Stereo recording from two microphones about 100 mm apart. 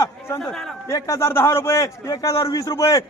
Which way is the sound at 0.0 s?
35° left (ahead or behind).